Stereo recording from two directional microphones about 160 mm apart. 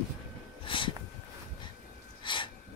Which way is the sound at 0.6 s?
30° left (ahead or behind).